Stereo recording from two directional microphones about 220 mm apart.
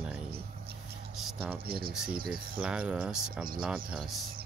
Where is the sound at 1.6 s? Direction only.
45° right (ahead or behind).